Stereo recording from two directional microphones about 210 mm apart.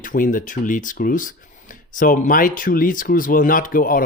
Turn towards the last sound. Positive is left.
turn(degrees=40)  # may be behind; listen again after turning